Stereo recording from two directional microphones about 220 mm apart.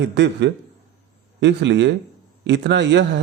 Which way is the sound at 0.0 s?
50° right (ahead or behind).